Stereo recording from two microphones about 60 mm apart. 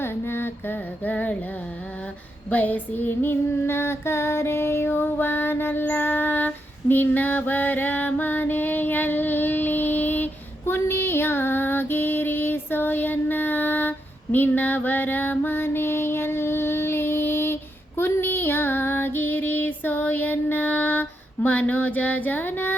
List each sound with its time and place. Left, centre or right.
0.0 s mantra: left
1.0 s a sound: left
2.5 s female singing: left